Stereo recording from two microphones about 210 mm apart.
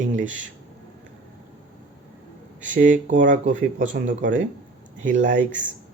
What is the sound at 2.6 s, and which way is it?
Speech, 35° right (ahead or behind).